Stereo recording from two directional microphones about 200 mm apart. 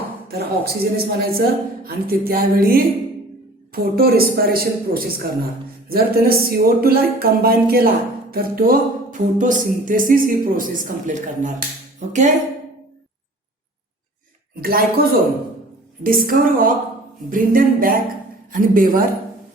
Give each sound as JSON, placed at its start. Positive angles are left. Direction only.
{"t": 0.3, "sound": "speech", "side_deg": -50}
{"t": 14.6, "sound": "speech", "side_deg": -50}